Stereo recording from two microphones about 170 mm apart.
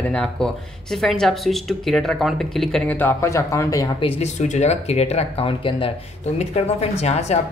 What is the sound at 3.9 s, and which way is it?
Speech, 35° left (ahead or behind).